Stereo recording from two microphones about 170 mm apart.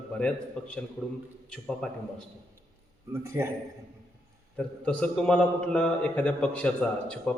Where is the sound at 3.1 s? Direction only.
15° right (ahead or behind).